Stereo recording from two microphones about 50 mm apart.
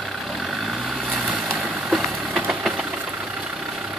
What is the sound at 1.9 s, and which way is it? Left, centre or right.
Vehicle, centre.